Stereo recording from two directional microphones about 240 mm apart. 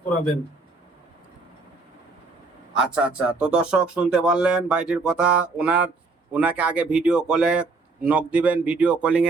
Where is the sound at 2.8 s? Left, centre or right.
Centre.